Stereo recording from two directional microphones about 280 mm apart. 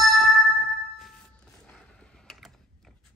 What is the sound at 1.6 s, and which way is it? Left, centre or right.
Mechanisms, centre.